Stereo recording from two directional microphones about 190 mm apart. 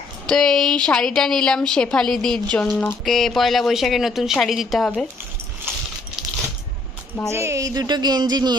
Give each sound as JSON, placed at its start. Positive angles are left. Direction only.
{"t": 0.3, "sound": "a woman's voice", "side_deg": 0}
{"t": 7.2, "sound": "speech", "side_deg": -15}